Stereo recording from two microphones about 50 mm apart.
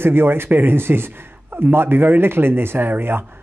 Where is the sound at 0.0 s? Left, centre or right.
Right.